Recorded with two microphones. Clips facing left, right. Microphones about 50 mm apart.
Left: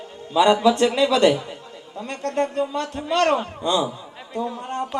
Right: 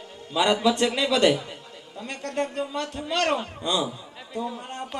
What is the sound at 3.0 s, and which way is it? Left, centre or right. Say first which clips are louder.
Speech: left 4 dB; left.